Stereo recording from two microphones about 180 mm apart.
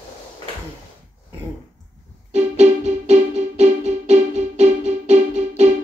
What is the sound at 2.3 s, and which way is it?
Music, 40° right (ahead or behind).